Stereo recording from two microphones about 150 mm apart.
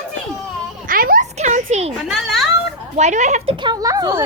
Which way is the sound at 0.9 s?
70° right (ahead or behind).